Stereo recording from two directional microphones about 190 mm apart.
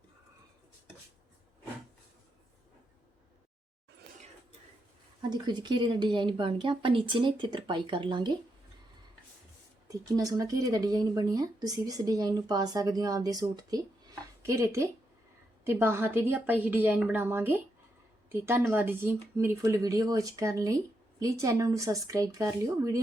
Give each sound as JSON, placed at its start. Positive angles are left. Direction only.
{"t": 5.2, "sound": "speech", "side_deg": -20}
{"t": 9.9, "sound": "speech", "side_deg": -20}